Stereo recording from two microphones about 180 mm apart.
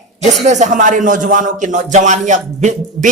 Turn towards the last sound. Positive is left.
turn(degrees=-40)  # may be behind; listen again after turning